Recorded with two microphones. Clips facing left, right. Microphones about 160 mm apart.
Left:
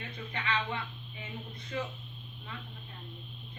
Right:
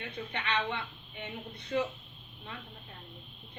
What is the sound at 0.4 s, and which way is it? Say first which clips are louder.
Speech: right 1 dB; 70° right (ahead or behind).